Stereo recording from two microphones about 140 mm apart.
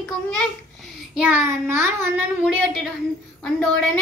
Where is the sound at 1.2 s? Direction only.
10° right (ahead or behind).